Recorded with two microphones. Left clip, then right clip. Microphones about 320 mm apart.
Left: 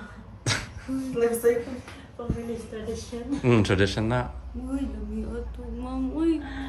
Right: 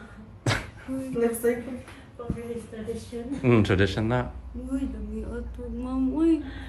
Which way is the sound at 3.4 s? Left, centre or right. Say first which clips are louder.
Even; centre.